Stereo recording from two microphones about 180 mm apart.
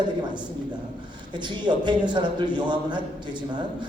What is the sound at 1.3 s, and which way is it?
Speech, 25° right (ahead or behind).